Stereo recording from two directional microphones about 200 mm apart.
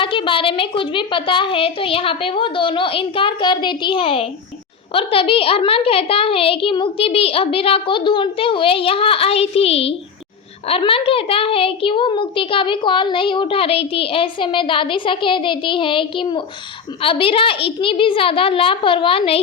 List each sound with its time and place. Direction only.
0.0 s a child's voice: 25° left (ahead or behind)